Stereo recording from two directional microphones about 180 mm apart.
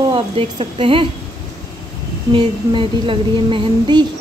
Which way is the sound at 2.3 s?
25° right (ahead or behind).